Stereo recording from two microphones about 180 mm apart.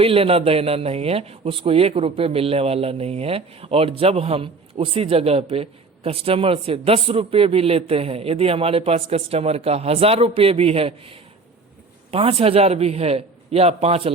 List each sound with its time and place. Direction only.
0.0 s a man's voice: 30° right (ahead or behind)